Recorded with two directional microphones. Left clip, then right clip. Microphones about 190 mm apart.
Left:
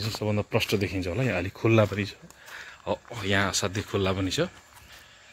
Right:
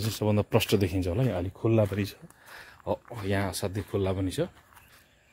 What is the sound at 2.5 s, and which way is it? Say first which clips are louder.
Speech: left 1 dB; 25° right (ahead or behind).